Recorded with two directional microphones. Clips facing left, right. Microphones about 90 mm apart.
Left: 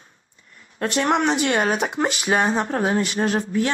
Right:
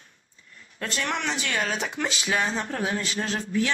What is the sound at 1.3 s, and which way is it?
Speech, 50° left (ahead or behind).